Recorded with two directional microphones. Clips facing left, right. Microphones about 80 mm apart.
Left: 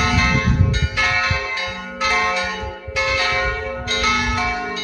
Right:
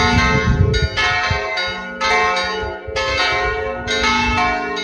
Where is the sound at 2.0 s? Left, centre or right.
Right.